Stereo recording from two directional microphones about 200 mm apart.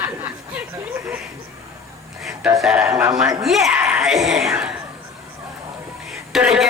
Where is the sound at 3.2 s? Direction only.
Centre (ahead or behind).